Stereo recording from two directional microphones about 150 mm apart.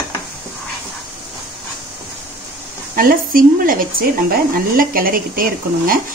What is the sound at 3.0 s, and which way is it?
A woman's voice, 70° right (ahead or behind).